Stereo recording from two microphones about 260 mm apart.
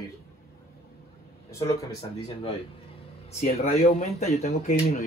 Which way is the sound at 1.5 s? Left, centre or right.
Centre.